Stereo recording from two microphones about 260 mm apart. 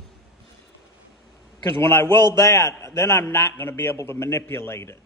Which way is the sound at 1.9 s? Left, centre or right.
Centre.